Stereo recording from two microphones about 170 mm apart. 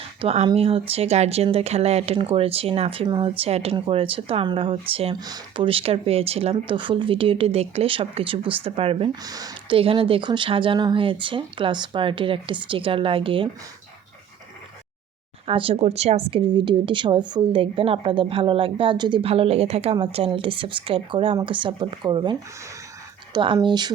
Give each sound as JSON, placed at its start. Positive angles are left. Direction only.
{"t": 0.2, "sound": "speech", "side_deg": -35}
{"t": 9.2, "sound": "speech", "side_deg": -20}
{"t": 15.4, "sound": "speech", "side_deg": -35}